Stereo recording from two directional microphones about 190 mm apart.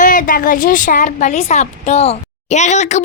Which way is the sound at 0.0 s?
45° left (ahead or behind).